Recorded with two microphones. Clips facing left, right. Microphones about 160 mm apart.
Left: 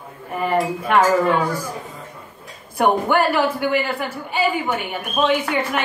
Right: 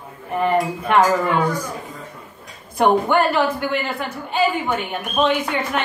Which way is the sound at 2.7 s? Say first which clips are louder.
Right 1 dB; 5° left (ahead or behind).